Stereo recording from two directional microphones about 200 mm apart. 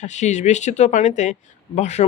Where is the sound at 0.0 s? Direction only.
35° left (ahead or behind).